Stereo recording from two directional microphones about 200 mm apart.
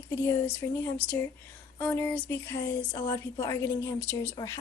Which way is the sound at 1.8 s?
10° left (ahead or behind).